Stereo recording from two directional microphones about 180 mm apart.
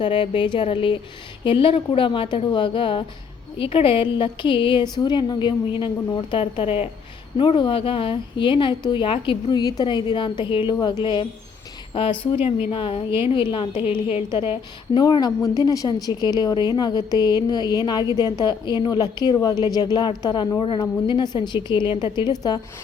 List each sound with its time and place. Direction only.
0.0 s a woman's voice: 25° left (ahead or behind)
13.1 s a woman's voice: 15° right (ahead or behind)
13.3 s a woman's voice: 30° left (ahead or behind)